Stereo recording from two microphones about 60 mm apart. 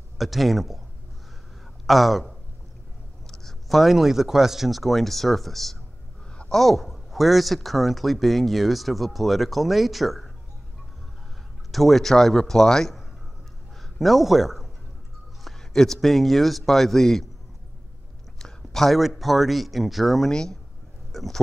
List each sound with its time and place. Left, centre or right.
0.2 s speech: centre
1.9 s speech: centre
11.7 s speech: centre
13.7 s a sound: centre
15.4 s speech: centre
18.4 s speech: centre
20.2 s speech: centre
21.1 s a sound: centre